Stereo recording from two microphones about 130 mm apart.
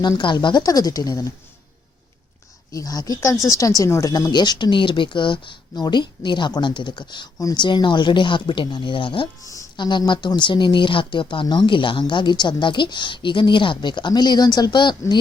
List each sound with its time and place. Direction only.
0.0 s speech: 35° left (ahead or behind)
2.7 s speech: 30° left (ahead or behind)
9.4 s speech: 25° left (ahead or behind)